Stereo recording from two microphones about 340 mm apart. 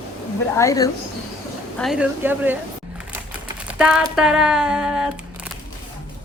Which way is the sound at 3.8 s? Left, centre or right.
Centre.